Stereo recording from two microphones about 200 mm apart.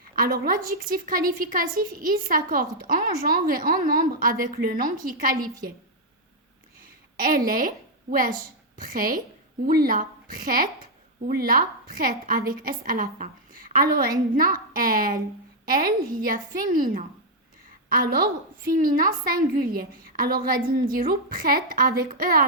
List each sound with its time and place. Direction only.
0.2 s a woman's voice: 45° right (ahead or behind)
7.2 s a woman's voice: 45° right (ahead or behind)
18.6 s a woman's voice: 45° right (ahead or behind)